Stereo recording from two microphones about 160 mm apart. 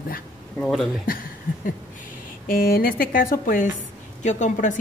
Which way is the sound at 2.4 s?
65° left (ahead or behind).